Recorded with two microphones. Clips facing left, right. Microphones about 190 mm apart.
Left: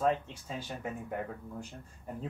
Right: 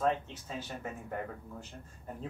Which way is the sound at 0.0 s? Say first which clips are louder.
Left 1 dB; 10° left (ahead or behind).